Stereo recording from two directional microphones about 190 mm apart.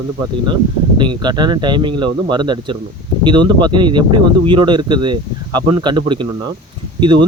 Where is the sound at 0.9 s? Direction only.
25° right (ahead or behind).